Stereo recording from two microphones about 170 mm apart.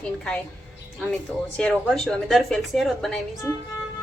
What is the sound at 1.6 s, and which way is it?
A woman's voice, 5° left (ahead or behind).